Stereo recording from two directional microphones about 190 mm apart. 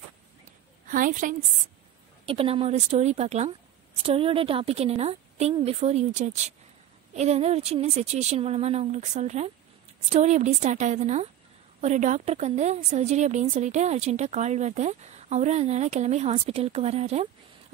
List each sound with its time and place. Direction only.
0.8 s a woman's voice: 45° right (ahead or behind)
2.2 s a woman's voice: 30° right (ahead or behind)